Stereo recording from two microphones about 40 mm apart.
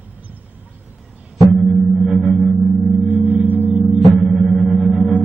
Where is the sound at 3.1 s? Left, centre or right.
Right.